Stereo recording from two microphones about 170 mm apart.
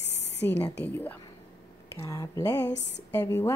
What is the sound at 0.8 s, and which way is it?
A woman's voice, 10° left (ahead or behind).